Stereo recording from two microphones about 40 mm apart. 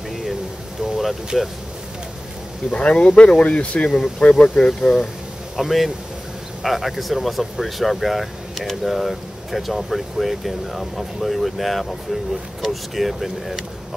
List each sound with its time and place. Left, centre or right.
0.8 s speech: centre
2.7 s speech: left
4.6 s speech: centre
5.6 s speech: centre